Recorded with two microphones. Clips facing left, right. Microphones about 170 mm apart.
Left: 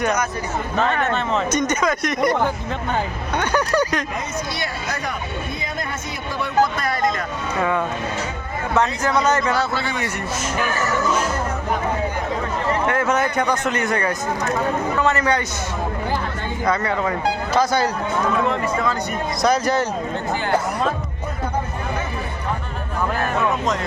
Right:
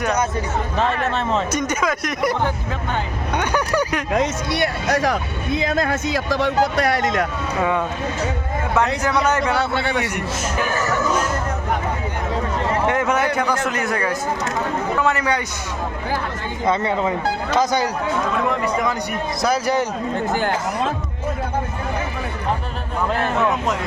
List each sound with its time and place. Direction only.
0.8 s speech: 30° right (ahead or behind)
1.5 s speech: 5° right (ahead or behind)
3.3 s speech: 10° right (ahead or behind)
4.1 s speech: 75° right (ahead or behind)
7.6 s speech: 10° right (ahead or behind)
9.0 s speech: 10° right (ahead or behind)
9.4 s a man's voice: 65° right (ahead or behind)
12.9 s speech: 15° right (ahead or behind)
16.6 s speech: 25° right (ahead or behind)